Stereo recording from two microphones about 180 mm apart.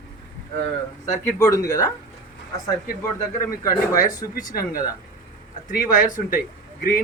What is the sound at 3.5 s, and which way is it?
Speech, 20° left (ahead or behind).